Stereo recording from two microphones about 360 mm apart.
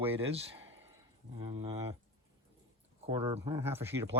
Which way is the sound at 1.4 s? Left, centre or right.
Centre.